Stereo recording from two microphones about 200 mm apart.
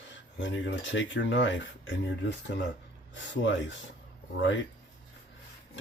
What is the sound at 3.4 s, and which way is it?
Speech, 65° left (ahead or behind).